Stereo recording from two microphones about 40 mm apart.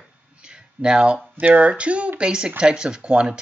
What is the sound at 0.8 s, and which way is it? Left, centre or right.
Speech, right.